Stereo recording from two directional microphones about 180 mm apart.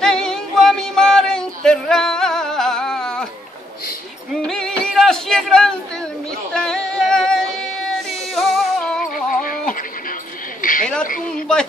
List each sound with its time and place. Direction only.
0.0 s music: 5° left (ahead or behind)
4.5 s music: 5° left (ahead or behind)
6.5 s female singing: 5° left (ahead or behind)
8.4 s music: 5° left (ahead or behind)
9.1 s a sound: 50° left (ahead or behind)